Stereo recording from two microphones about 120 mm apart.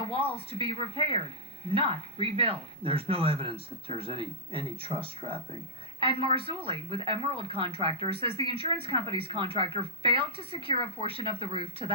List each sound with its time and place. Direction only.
0.1 s speech: 50° right (ahead or behind)